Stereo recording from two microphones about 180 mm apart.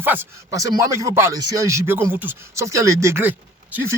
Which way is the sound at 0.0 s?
10° right (ahead or behind).